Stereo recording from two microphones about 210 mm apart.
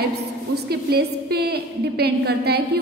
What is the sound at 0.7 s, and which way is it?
A woman's voice, 50° right (ahead or behind).